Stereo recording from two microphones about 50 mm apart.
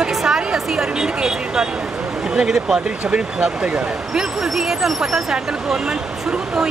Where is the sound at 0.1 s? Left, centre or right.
Centre.